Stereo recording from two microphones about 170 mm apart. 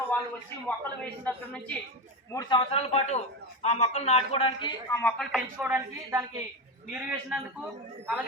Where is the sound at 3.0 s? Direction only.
40° left (ahead or behind).